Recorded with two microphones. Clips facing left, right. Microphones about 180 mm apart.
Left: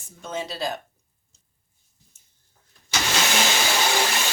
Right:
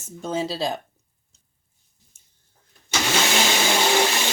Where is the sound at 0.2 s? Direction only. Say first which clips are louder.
Right 4 dB; 35° right (ahead or behind).